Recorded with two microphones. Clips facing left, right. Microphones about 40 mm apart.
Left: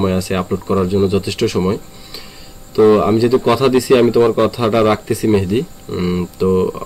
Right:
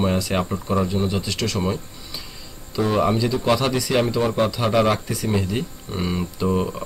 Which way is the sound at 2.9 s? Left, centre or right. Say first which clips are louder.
Left 8 dB; centre.